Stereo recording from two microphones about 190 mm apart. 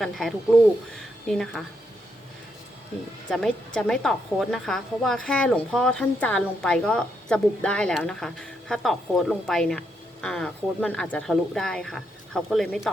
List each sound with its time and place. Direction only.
0.0 s a woman's voice: centre (ahead or behind)
3.2 s a woman's voice: 5° left (ahead or behind)